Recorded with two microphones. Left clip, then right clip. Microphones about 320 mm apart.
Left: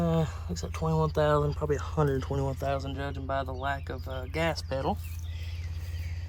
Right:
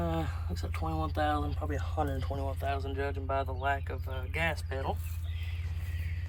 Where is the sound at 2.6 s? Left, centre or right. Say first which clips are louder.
Left 2 dB; centre.